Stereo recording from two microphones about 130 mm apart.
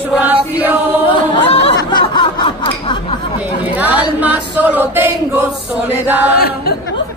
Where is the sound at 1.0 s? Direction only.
45° left (ahead or behind).